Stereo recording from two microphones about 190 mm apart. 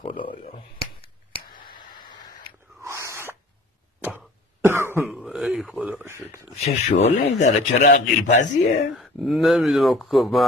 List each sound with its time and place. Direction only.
0.0 s a sound: 25° left (ahead or behind)
1.5 s tick: 50° left (ahead or behind)
2.8 s snort: 15° right (ahead or behind)
4.6 s cough: 10° right (ahead or behind)
5.1 s a sound: 5° right (ahead or behind)
6.6 s a man's voice: 35° left (ahead or behind)
8.9 s speech: centre (ahead or behind)